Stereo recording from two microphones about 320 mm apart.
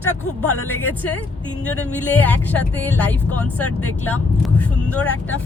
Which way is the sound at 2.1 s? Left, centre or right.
Centre.